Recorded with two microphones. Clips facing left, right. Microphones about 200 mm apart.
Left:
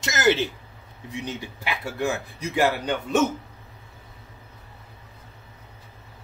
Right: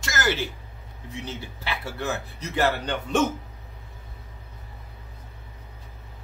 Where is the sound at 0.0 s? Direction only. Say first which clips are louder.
Left 5 dB; 20° left (ahead or behind).